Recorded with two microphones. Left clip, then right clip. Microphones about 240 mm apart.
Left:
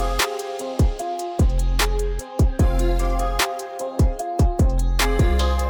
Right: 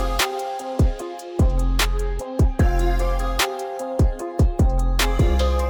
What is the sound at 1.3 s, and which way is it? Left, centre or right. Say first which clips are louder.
Music: right 1 dB; centre.